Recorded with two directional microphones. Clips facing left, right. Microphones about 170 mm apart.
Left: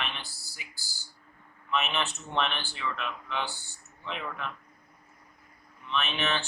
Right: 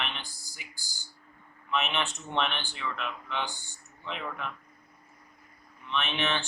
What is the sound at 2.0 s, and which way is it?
Speech, 15° right (ahead or behind).